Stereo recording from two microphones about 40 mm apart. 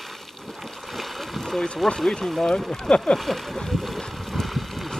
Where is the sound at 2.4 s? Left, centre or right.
Left.